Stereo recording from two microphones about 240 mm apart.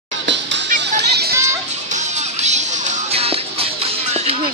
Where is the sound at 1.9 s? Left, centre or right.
Right.